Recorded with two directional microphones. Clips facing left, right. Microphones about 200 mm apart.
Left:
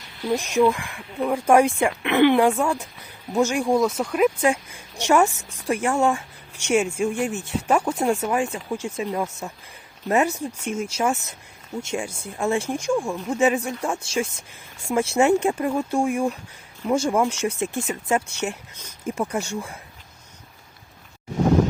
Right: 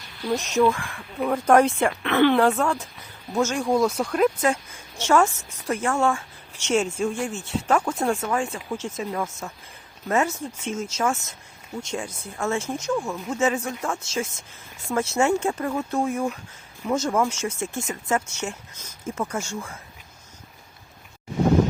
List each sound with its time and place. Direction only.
0.3 s speech: 10° left (ahead or behind)
3.8 s speech: centre (ahead or behind)